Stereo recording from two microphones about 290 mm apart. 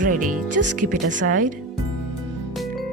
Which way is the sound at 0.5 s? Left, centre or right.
Right.